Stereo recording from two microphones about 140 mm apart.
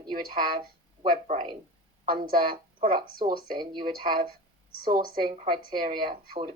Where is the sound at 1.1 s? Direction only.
65° right (ahead or behind).